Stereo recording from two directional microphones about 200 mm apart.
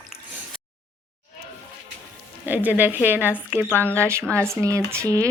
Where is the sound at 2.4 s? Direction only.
10° right (ahead or behind).